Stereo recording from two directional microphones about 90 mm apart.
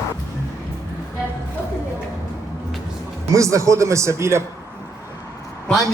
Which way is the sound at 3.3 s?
35° right (ahead or behind).